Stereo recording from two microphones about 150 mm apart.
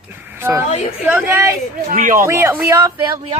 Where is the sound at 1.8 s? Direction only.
65° right (ahead or behind).